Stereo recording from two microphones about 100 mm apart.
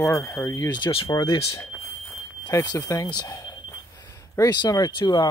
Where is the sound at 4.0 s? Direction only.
35° left (ahead or behind).